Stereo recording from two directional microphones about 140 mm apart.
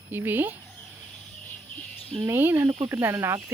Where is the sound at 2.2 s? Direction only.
15° right (ahead or behind).